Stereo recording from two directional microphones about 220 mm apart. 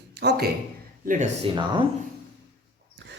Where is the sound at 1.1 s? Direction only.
35° right (ahead or behind).